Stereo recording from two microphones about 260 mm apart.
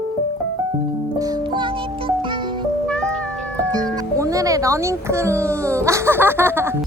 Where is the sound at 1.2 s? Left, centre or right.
Centre.